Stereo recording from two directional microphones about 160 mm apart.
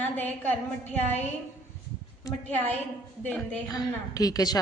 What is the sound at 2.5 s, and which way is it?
A woman's voice, 10° left (ahead or behind).